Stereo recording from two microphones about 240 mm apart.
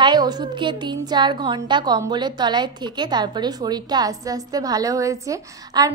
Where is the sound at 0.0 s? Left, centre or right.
Centre.